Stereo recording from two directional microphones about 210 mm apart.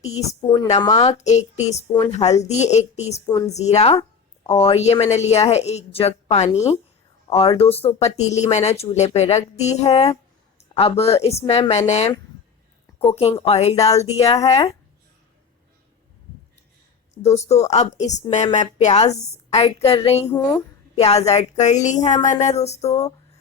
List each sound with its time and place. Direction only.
0.0 s speech: 30° left (ahead or behind)
0.4 s a woman's voice: 15° left (ahead or behind); by 3.2 s 30° left (ahead or behind)
3.2 s a woman's voice: 15° left (ahead or behind)
3.5 s speech: 30° left (ahead or behind)
17.2 s speech: 30° left (ahead or behind)
20.2 s a woman's voice: 15° left (ahead or behind)
21.0 s speech: 30° left (ahead or behind)